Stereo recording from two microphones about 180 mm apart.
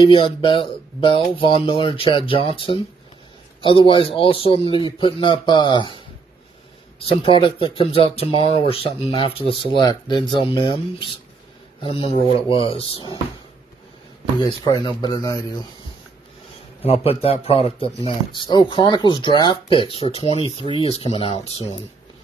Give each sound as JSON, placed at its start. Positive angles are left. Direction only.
{"t": 0.0, "sound": "speech", "side_deg": 30}
{"t": 7.1, "sound": "a man's voice", "side_deg": 30}
{"t": 14.4, "sound": "speech", "side_deg": 25}
{"t": 16.8, "sound": "a man's voice", "side_deg": 35}